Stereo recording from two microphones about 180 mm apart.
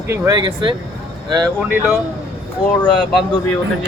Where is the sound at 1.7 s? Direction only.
10° right (ahead or behind).